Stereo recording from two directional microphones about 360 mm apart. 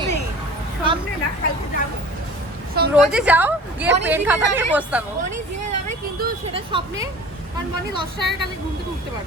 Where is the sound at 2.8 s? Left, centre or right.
Right.